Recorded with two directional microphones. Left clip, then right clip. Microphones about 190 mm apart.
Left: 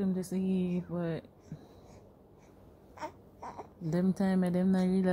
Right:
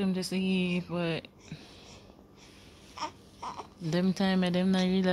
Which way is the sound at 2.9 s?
55° left (ahead or behind).